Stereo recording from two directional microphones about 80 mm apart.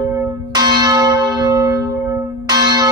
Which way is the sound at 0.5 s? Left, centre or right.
Right.